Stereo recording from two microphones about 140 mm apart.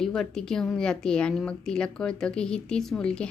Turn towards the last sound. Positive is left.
turn(degrees=5)  # may be behind; listen again after turning